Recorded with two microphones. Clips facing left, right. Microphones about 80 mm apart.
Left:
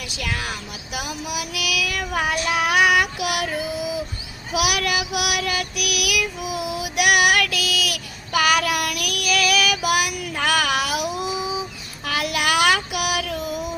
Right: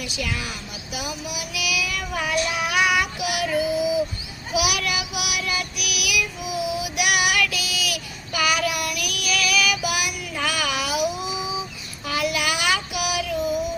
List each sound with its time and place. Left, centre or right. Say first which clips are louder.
0.2 s speech: left 2 dB; left
0.9 s child singing: left 3 dB; left
4.5 s child singing: left 2 dB; left
12.0 s child singing: left 1 dB; left